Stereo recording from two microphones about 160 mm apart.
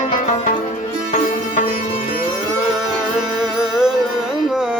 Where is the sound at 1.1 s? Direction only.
50° left (ahead or behind).